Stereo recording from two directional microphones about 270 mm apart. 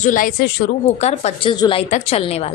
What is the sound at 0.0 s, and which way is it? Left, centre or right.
Speech, left.